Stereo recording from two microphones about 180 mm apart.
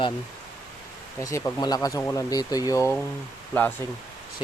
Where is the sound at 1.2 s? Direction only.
15° left (ahead or behind).